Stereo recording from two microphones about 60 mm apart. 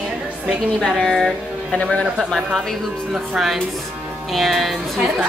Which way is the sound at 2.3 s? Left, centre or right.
Centre.